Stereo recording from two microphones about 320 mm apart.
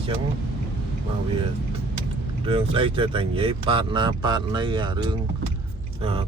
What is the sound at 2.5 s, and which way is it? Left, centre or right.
Speech, centre.